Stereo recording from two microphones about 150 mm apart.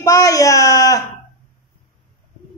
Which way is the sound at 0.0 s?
25° left (ahead or behind).